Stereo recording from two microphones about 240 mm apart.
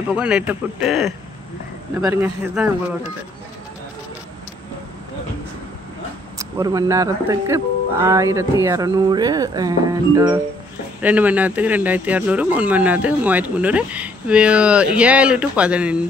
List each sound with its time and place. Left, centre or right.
0.1 s speech: centre
6.3 s speech: centre